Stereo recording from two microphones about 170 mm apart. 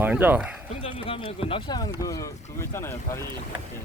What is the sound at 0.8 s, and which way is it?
Speech, 35° left (ahead or behind).